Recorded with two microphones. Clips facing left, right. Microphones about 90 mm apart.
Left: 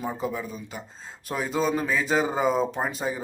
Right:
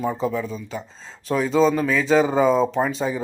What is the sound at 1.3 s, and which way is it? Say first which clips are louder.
Speech: right 7 dB; 10° left (ahead or behind).